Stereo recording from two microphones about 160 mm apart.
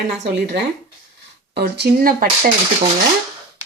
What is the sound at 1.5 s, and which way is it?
Speech, 90° right.